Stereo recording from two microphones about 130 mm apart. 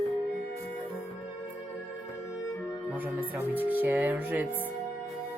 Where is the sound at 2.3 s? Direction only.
20° left (ahead or behind).